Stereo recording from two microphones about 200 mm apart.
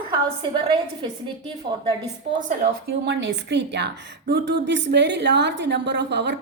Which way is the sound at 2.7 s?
55° right (ahead or behind).